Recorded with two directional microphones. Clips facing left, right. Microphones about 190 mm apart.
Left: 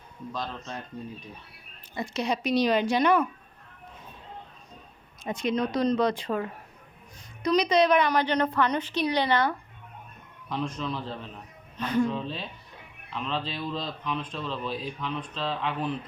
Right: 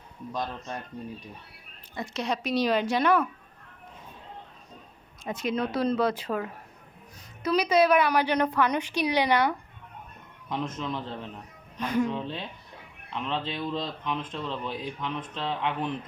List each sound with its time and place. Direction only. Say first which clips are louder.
2.0 s speech: left 2 dB; centre (ahead or behind)
5.2 s a woman's voice: left 2 dB; 5° right (ahead or behind); by 15.9 s 20° right (ahead or behind)